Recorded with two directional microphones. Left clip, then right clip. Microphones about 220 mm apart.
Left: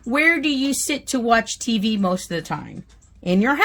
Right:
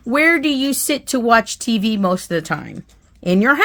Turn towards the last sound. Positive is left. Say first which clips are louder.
# right 5 dB
turn(degrees=-20)  # may be behind; listen again after turning